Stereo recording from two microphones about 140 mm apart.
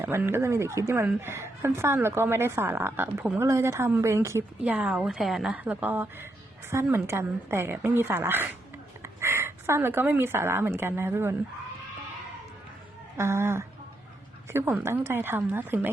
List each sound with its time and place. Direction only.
0.0 s speech: 15° right (ahead or behind)
4.6 s speech: 10° right (ahead or behind)
13.1 s speech: 20° right (ahead or behind)